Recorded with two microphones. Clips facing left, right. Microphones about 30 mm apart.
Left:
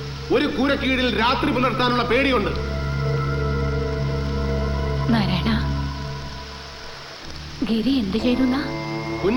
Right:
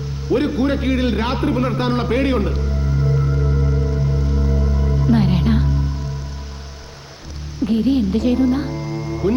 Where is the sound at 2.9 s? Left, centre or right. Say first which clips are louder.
Right 5 dB; left.